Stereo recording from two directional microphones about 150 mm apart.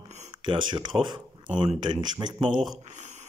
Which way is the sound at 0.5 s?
30° right (ahead or behind).